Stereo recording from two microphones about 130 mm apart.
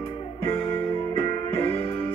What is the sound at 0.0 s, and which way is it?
Music, 45° left (ahead or behind).